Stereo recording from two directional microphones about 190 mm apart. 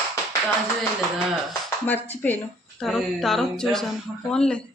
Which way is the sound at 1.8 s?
10° left (ahead or behind).